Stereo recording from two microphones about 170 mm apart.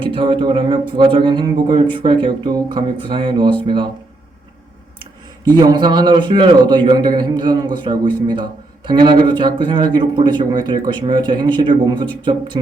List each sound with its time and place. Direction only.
0.0 s a man's voice: 30° right (ahead or behind)
5.5 s a man's voice: 25° right (ahead or behind)